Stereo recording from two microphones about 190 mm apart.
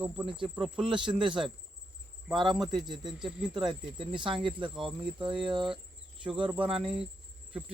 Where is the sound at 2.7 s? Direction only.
25° right (ahead or behind).